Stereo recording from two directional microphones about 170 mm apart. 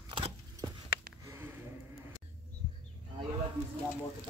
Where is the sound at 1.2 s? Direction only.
15° right (ahead or behind).